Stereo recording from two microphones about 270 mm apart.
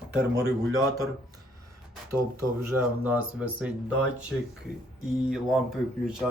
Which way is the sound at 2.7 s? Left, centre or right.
Centre.